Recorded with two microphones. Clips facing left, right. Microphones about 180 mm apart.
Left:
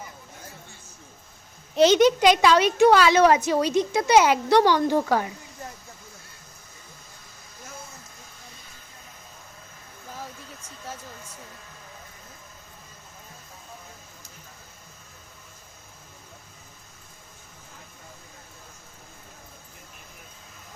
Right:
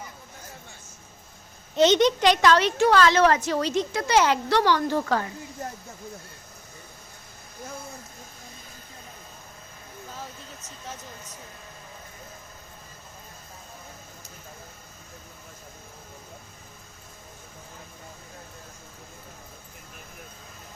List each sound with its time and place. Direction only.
1.7 s a woman's voice: centre (ahead or behind)